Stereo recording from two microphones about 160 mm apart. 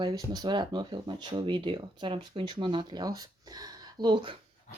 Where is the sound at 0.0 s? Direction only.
25° right (ahead or behind).